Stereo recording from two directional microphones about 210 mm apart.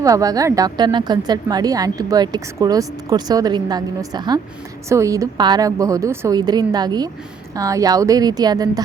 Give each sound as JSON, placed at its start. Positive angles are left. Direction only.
{"t": 0.0, "sound": "a woman's voice", "side_deg": -15}